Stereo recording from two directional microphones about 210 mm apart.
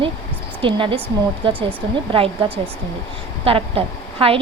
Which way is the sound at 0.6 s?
25° right (ahead or behind).